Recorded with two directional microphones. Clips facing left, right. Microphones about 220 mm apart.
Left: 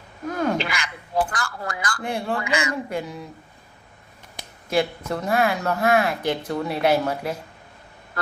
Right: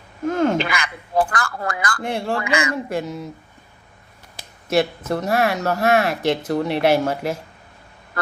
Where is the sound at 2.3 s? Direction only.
80° right.